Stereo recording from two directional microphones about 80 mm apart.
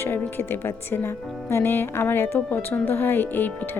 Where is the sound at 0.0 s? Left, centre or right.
Left.